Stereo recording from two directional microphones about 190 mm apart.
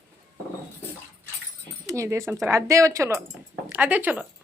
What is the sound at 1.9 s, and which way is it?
Speech, 15° right (ahead or behind).